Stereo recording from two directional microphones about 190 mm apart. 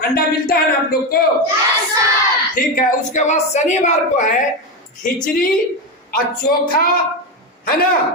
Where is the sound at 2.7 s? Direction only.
40° left (ahead or behind).